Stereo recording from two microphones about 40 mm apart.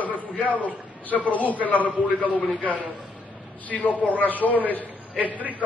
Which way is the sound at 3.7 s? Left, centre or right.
Left.